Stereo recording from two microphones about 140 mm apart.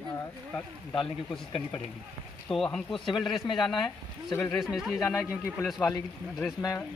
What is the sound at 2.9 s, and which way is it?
Speech, 35° left (ahead or behind).